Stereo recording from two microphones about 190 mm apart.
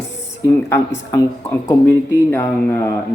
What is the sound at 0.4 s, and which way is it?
Speech, 15° left (ahead or behind).